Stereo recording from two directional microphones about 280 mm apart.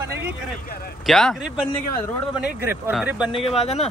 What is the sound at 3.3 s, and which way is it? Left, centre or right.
Speech, left.